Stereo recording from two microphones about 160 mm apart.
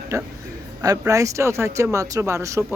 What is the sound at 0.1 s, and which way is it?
Speech, 20° right (ahead or behind).